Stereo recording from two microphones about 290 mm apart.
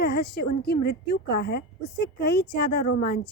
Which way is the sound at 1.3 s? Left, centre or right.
Left.